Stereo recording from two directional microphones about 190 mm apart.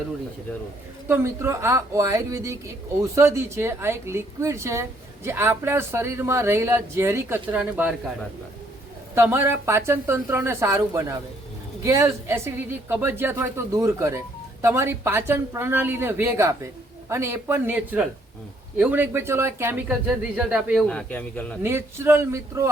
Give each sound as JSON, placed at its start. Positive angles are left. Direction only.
{"t": 1.0, "sound": "speech", "side_deg": -10}
{"t": 9.1, "sound": "speech", "side_deg": -10}
{"t": 21.6, "sound": "speech", "side_deg": -10}